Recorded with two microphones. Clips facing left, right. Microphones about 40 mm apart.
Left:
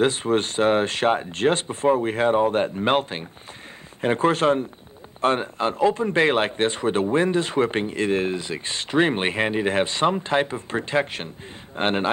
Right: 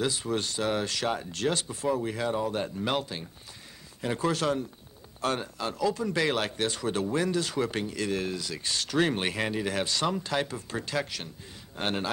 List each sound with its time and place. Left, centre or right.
0.0 s a man's voice: left